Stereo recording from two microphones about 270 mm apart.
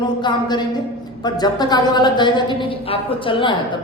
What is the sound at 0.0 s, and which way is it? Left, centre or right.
A woman's voice, centre.